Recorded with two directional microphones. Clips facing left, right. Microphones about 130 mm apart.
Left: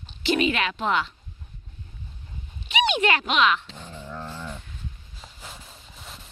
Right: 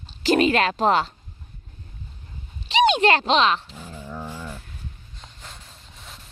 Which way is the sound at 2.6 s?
35° right (ahead or behind).